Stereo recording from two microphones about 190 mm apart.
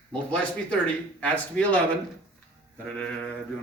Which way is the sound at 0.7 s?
5° left (ahead or behind).